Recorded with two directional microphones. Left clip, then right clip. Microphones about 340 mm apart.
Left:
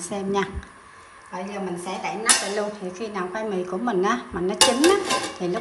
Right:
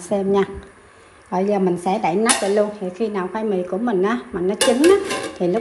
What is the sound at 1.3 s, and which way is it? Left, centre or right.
Speech, centre.